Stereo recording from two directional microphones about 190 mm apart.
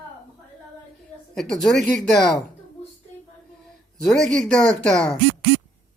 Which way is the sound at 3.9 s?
Centre (ahead or behind).